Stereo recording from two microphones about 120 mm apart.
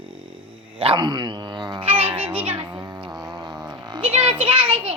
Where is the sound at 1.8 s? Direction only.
55° right (ahead or behind).